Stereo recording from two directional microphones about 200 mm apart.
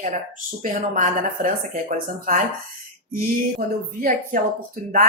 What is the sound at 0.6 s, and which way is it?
Speech, 40° right (ahead or behind).